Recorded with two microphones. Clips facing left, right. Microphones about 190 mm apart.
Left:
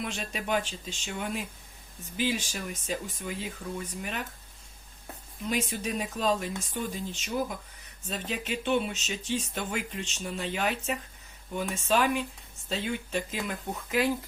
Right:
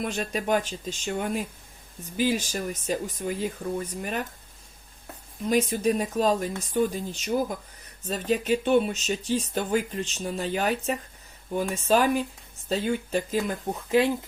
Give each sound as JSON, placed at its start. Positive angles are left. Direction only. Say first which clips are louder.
{"t": 0.0, "sound": "speech", "louder": "right 6 dB", "side_deg": -45}
{"t": 5.5, "sound": "speech", "louder": "right 8 dB", "side_deg": -40}